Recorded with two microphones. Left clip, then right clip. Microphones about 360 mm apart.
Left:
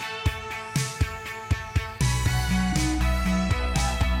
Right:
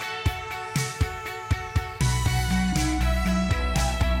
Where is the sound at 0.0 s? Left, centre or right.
Centre.